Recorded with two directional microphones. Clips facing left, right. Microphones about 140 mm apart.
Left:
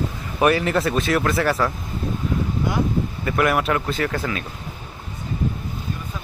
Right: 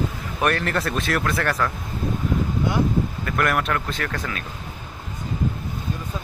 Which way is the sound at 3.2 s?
5° left (ahead or behind).